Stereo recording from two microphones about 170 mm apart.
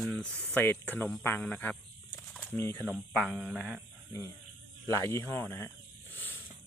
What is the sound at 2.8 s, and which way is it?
Speech, centre (ahead or behind).